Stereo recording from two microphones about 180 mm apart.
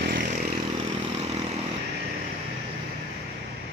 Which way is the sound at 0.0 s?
50° right (ahead or behind).